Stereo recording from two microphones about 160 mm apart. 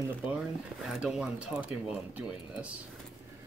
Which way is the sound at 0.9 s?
5° right (ahead or behind).